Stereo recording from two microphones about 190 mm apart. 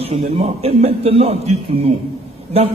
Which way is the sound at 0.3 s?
35° right (ahead or behind).